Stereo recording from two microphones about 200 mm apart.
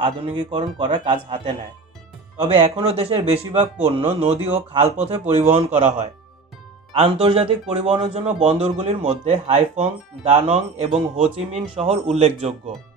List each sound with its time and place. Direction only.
0.0 s a man's voice: 25° right (ahead or behind)